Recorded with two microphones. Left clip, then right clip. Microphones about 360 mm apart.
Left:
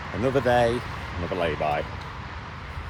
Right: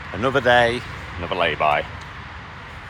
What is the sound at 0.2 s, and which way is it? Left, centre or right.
Speech, centre.